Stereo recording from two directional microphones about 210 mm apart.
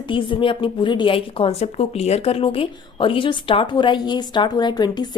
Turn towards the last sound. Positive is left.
turn(degrees=20)  # may be behind; listen again after turning